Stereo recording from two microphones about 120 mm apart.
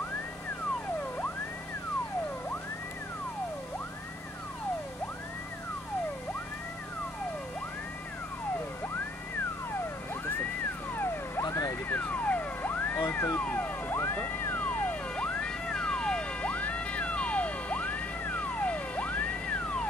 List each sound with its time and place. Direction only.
11.4 s vehicle: 30° left (ahead or behind)
11.9 s music: 15° left (ahead or behind)